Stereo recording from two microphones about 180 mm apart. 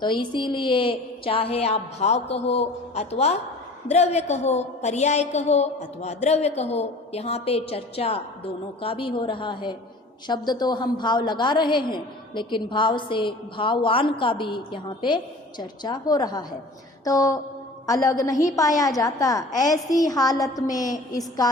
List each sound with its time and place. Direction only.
0.0 s a woman's voice: 25° left (ahead or behind)
17.0 s a sound: 20° left (ahead or behind)
17.8 s a woman's voice: 20° left (ahead or behind)